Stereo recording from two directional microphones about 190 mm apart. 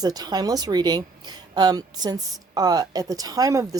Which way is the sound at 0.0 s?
20° right (ahead or behind).